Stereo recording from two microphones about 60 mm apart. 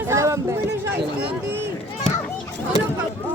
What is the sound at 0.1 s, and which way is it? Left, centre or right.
Chatter, right.